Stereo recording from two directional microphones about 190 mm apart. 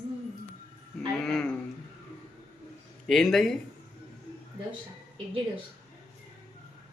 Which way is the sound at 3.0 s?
Centre (ahead or behind).